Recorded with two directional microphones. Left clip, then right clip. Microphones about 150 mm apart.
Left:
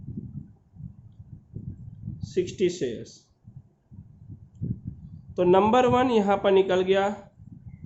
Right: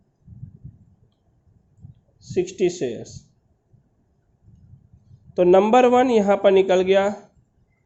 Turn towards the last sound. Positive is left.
turn(degrees=-40)  # may be behind; listen again after turning